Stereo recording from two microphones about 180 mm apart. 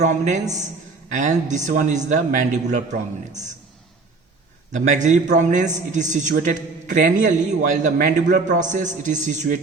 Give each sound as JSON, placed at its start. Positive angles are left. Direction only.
{"t": 0.0, "sound": "a woman's voice", "side_deg": -40}
{"t": 4.7, "sound": "a man's voice", "side_deg": -40}